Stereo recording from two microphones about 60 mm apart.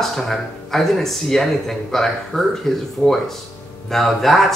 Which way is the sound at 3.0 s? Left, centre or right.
Centre.